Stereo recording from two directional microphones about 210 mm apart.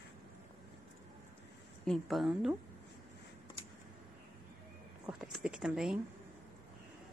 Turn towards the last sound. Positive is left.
turn(degrees=-5)  # may be behind; listen again after turning